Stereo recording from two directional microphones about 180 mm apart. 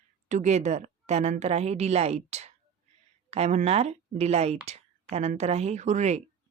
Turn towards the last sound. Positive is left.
turn(degrees=-40)  # may be behind; listen again after turning